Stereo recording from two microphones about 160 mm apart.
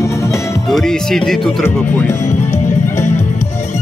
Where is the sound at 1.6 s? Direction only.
15° left (ahead or behind).